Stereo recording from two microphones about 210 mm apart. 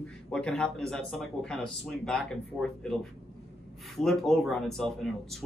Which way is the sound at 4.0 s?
Centre (ahead or behind).